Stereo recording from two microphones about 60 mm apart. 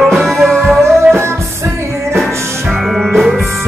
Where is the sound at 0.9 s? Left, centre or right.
Right.